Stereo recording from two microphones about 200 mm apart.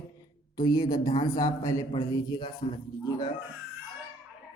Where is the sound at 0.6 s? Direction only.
20° left (ahead or behind).